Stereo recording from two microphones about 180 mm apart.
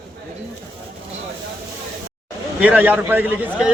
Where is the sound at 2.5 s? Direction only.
10° right (ahead or behind).